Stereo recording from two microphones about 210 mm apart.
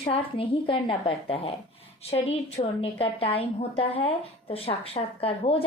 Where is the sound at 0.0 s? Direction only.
25° left (ahead or behind).